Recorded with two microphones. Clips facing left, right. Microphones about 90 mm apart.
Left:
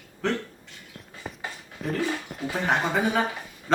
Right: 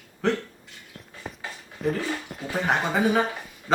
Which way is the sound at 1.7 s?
Centre (ahead or behind).